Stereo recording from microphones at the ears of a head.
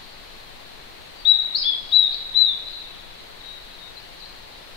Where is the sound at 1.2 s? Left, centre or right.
Left.